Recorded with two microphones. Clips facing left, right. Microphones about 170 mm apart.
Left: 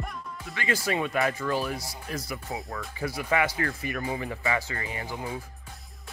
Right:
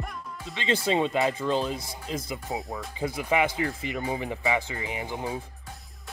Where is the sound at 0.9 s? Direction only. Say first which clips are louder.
Right 3 dB; 20° right (ahead or behind).